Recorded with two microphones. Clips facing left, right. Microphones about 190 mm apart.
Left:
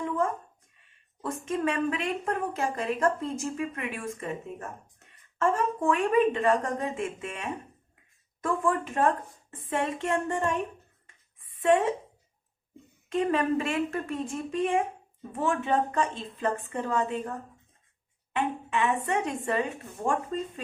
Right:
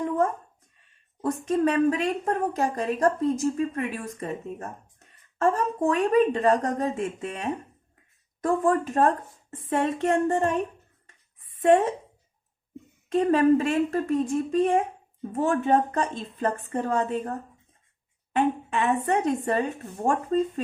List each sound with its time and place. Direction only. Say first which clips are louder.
1.2 s a woman's voice: right 6 dB; 40° right (ahead or behind)
13.1 s a woman's voice: right 6 dB; 40° right (ahead or behind)
18.3 s a woman's voice: right 4 dB; 40° right (ahead or behind)